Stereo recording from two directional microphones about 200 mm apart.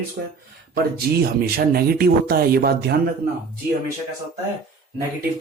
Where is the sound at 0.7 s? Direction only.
50° right (ahead or behind).